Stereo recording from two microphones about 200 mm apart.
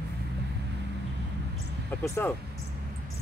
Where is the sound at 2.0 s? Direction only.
15° left (ahead or behind).